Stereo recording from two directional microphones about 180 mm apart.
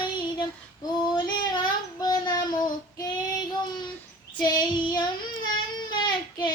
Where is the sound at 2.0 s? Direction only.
20° left (ahead or behind).